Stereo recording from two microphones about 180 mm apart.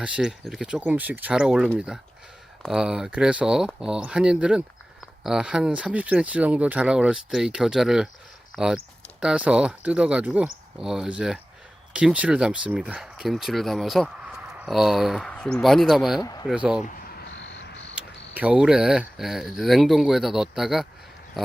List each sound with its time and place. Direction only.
0.0 s speech: 5° right (ahead or behind)
16.2 s speech: 20° left (ahead or behind)
16.5 s speech: 5° right (ahead or behind)
16.8 s a sound: 50° left (ahead or behind)
17.2 s cricket: 85° left
17.9 s speech: 5° right (ahead or behind)